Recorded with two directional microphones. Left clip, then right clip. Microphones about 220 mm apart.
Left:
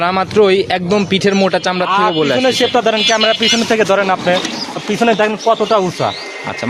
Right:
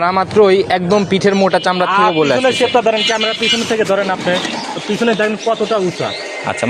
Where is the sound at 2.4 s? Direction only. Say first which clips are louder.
Even; 40° left (ahead or behind).